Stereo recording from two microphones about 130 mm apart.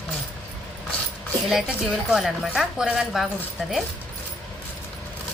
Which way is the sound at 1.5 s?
5° right (ahead or behind).